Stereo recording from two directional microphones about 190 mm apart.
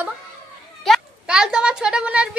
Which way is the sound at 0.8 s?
Centre (ahead or behind).